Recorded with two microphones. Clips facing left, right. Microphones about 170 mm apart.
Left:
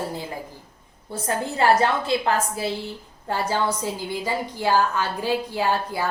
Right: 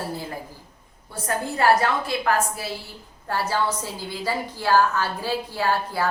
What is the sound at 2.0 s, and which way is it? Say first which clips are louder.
A woman's voice: left 1 dB; 25° left (ahead or behind).